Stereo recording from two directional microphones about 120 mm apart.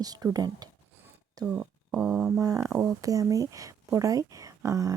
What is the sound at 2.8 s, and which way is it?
Speech, 30° right (ahead or behind).